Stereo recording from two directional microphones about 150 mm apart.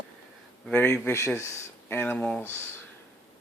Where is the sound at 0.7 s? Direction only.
15° left (ahead or behind).